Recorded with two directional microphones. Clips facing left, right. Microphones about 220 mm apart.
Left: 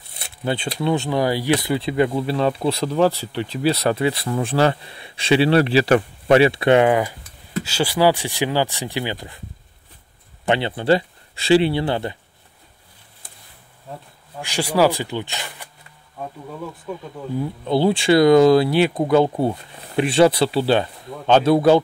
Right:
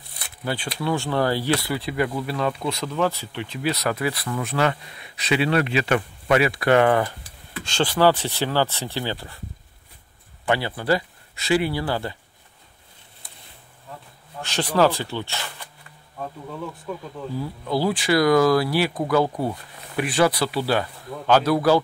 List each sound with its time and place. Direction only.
0.2 s speech: 25° left (ahead or behind)
10.4 s speech: 25° left (ahead or behind)
14.4 s speech: 10° left (ahead or behind)
17.4 s speech: 25° left (ahead or behind)